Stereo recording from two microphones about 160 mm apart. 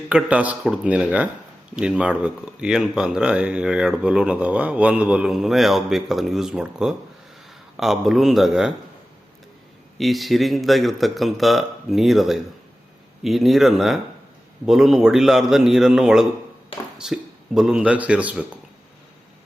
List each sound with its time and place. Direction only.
0.1 s speech: 10° right (ahead or behind)
10.0 s a man's voice: centre (ahead or behind)